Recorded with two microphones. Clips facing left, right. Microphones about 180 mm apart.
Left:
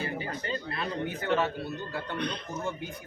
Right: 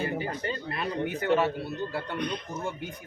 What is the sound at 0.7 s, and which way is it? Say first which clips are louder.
A man's voice: right 4 dB; 10° right (ahead or behind).